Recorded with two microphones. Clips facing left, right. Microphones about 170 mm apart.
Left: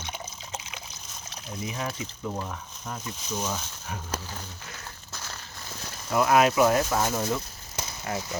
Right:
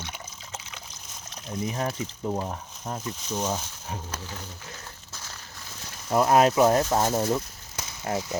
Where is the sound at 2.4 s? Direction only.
30° right (ahead or behind).